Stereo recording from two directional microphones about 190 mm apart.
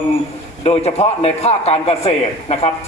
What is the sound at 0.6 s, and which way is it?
A man's voice, 35° left (ahead or behind).